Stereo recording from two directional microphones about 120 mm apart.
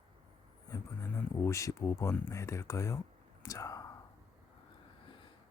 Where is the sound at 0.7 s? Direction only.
20° left (ahead or behind).